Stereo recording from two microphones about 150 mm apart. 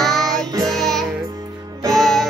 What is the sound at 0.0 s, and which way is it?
Music, centre (ahead or behind).